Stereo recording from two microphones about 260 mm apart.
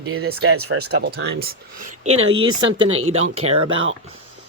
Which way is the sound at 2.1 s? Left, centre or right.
Right.